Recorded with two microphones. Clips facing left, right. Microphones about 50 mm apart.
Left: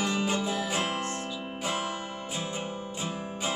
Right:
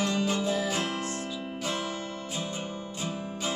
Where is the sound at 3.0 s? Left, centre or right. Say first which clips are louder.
Right 1 dB; centre.